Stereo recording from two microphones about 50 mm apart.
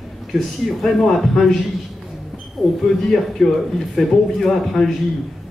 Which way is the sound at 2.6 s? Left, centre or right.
Centre.